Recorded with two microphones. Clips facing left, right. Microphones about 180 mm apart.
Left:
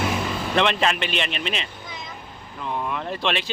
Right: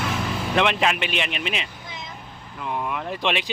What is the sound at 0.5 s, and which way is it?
Speech, 10° right (ahead or behind).